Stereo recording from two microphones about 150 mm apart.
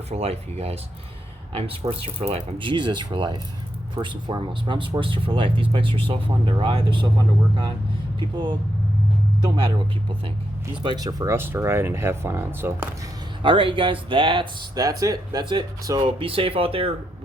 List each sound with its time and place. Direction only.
0.1 s speech: 45° right (ahead or behind)
9.4 s speech: 35° right (ahead or behind); by 12.9 s 15° right (ahead or behind)
13.4 s speech: 35° right (ahead or behind)